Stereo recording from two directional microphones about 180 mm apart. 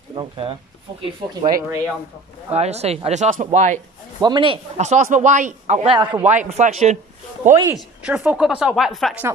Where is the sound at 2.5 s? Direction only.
35° right (ahead or behind).